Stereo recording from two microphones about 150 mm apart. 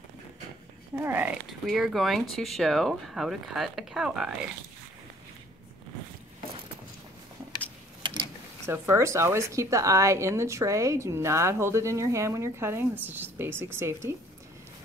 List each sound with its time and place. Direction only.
0.9 s speech: 15° right (ahead or behind)
1.7 s speech: centre (ahead or behind)
8.6 s a woman's voice: 15° right (ahead or behind)